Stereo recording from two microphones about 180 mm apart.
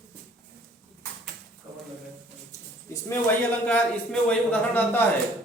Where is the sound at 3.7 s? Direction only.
5° left (ahead or behind).